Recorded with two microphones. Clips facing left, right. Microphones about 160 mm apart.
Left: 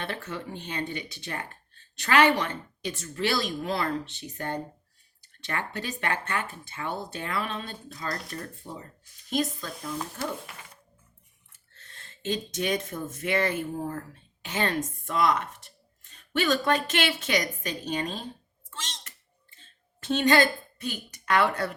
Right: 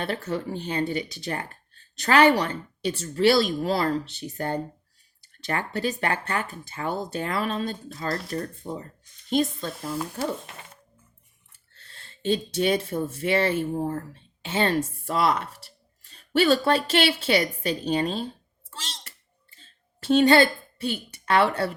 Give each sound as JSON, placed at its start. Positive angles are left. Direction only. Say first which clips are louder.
{"t": 0.0, "sound": "speech", "louder": "right 6 dB", "side_deg": -35}
{"t": 7.9, "sound": "speech", "louder": "right 3 dB", "side_deg": -25}
{"t": 8.7, "sound": "speech", "louder": "right 7 dB", "side_deg": -40}
{"t": 9.3, "sound": "speech", "louder": "right 4 dB", "side_deg": -30}
{"t": 11.7, "sound": "speech", "louder": "even", "side_deg": -35}
{"t": 18.7, "sound": "a sound", "louder": "right 1 dB", "side_deg": -35}